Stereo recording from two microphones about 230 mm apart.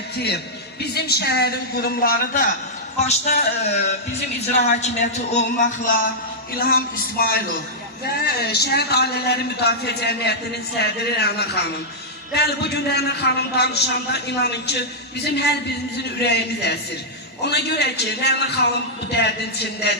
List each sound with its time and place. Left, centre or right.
0.8 s a man's voice: left
3.0 s music: left
4.8 s a man's voice: left